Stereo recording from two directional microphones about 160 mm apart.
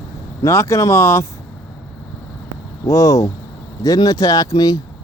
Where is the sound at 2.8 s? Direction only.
20° left (ahead or behind).